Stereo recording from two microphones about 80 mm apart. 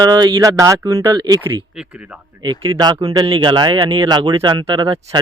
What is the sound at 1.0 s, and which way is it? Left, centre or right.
Speech, right.